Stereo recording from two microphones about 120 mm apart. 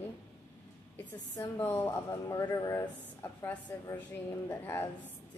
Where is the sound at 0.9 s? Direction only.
20° left (ahead or behind).